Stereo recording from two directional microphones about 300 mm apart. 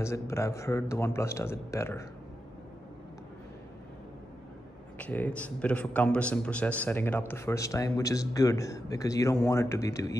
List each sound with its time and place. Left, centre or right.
0.0 s a man's voice: centre
4.9 s a man's voice: centre